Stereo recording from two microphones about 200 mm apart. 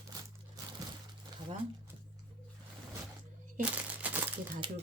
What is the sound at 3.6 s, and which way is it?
Crumpling, 10° right (ahead or behind).